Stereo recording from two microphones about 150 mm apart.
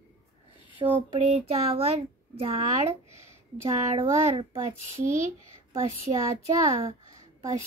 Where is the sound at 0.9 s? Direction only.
40° right (ahead or behind).